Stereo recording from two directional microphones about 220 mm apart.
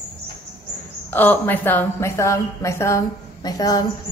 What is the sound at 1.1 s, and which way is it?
A woman's voice, 10° left (ahead or behind).